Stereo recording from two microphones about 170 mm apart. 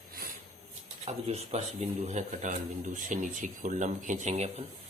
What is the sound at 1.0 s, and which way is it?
Speech, 40° right (ahead or behind).